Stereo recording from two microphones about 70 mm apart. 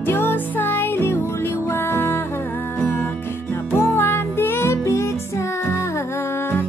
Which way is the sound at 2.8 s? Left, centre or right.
Left.